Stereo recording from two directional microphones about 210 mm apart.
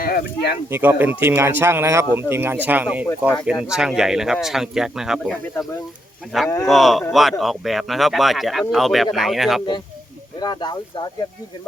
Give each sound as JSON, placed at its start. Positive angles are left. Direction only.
{"t": 0.0, "sound": "speech", "side_deg": 45}
{"t": 0.7, "sound": "speech", "side_deg": -10}
{"t": 10.4, "sound": "speech", "side_deg": 20}